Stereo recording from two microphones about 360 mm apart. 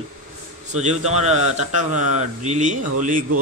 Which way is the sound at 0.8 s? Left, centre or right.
Centre.